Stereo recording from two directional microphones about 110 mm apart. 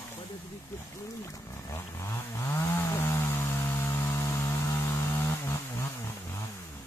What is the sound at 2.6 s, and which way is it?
Chainsaw, 25° left (ahead or behind).